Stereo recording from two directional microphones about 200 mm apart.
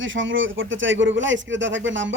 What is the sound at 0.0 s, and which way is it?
Speech, 70° right (ahead or behind).